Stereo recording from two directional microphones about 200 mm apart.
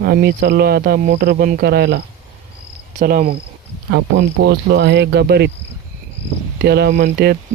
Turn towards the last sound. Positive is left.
turn(degrees=-50)  # may be behind; listen again after turning